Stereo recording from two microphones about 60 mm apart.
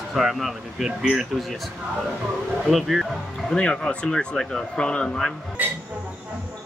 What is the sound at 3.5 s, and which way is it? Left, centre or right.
Speech, centre.